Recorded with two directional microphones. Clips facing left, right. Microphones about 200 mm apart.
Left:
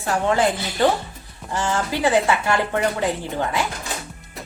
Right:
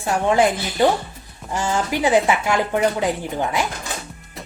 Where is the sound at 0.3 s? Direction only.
15° right (ahead or behind).